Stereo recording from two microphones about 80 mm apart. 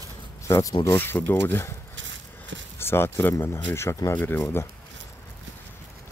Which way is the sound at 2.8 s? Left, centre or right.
Left.